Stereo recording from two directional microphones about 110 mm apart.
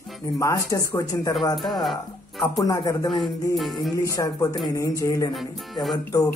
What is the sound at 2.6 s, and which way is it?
Speech, 35° left (ahead or behind).